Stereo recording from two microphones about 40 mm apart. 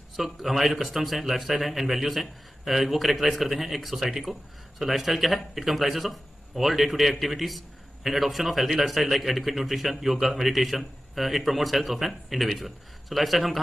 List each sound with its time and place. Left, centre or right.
0.1 s speech: centre